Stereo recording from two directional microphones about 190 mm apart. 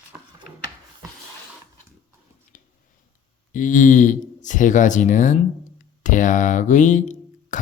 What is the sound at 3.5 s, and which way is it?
Speech, 40° left (ahead or behind).